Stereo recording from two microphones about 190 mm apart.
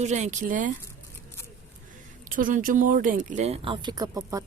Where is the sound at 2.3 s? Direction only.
45° right (ahead or behind); by 4.4 s 20° right (ahead or behind).